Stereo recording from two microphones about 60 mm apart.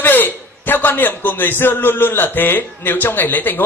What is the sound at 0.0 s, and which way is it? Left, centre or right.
A man's voice, left.